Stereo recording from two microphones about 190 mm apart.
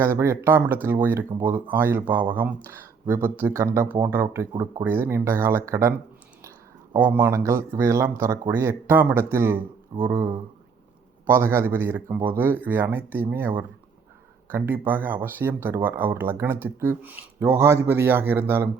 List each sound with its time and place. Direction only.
0.0 s speech: 15° right (ahead or behind)
6.9 s speech: 10° right (ahead or behind)
11.3 s speech: 10° right (ahead or behind)